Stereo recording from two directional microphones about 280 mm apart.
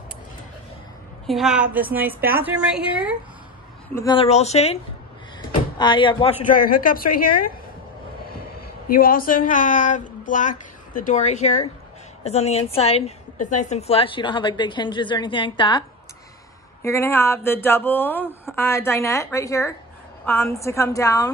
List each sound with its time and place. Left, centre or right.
1.2 s a woman's voice: centre
3.9 s speech: centre
5.8 s speech: centre
6.5 s a woman's voice: left
8.8 s a woman's voice: left
16.8 s speech: centre